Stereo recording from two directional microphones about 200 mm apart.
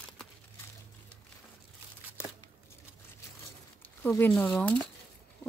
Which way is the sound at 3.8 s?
10° left (ahead or behind).